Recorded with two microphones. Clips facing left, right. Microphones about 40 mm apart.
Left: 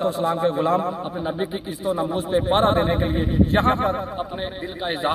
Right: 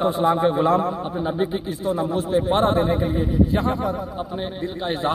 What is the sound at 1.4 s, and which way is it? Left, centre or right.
Speech, centre.